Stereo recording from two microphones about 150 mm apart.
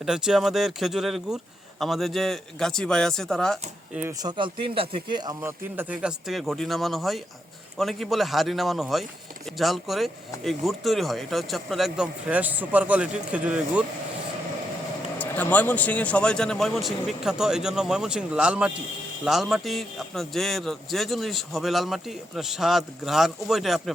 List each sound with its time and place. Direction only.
0.0 s a man's voice: 5° right (ahead or behind)
4.2 s speech: 30° right (ahead or behind)
5.4 s a man's voice: 15° right (ahead or behind)
15.2 s a man's voice: 10° left (ahead or behind)